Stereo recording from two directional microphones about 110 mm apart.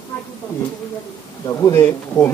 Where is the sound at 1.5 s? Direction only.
25° left (ahead or behind).